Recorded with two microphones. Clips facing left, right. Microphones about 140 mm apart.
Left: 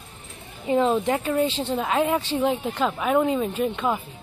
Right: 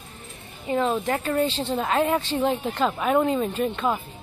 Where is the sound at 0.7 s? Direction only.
20° left (ahead or behind).